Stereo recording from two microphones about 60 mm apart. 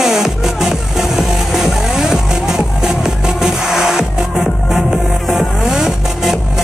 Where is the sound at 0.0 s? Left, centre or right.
Centre.